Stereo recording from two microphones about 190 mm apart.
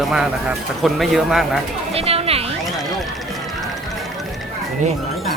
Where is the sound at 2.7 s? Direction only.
Centre (ahead or behind).